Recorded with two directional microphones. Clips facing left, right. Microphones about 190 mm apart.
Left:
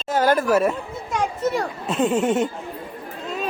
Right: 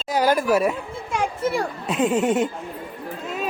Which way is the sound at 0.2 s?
10° right (ahead or behind).